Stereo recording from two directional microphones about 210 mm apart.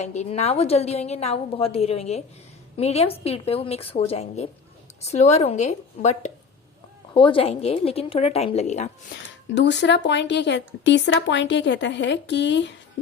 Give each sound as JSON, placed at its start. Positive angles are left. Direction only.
{"t": 0.0, "sound": "a woman's voice", "side_deg": 35}
{"t": 9.6, "sound": "speech", "side_deg": 55}